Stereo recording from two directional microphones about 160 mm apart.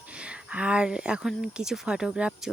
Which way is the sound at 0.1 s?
5° right (ahead or behind).